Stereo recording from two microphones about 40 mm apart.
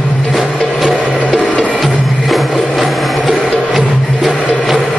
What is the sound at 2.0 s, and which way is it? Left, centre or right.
Music, centre.